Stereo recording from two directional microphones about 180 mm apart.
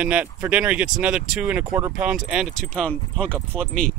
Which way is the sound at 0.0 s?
5° right (ahead or behind).